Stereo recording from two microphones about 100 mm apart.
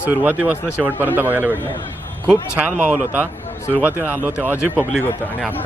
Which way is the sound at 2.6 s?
15° right (ahead or behind).